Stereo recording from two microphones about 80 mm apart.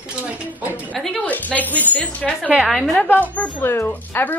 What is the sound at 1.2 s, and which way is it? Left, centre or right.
A woman's voice, centre.